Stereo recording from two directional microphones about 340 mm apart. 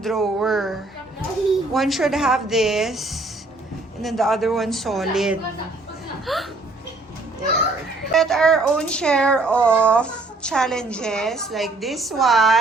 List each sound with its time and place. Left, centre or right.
0.0 s speech: centre
8.1 s speech: centre